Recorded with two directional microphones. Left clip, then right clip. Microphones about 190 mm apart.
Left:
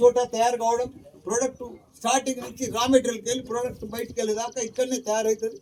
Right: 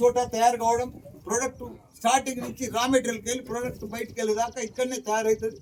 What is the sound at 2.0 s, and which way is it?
A man's voice, 5° right (ahead or behind).